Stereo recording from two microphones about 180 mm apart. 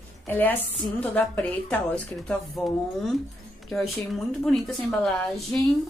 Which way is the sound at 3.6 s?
Centre (ahead or behind).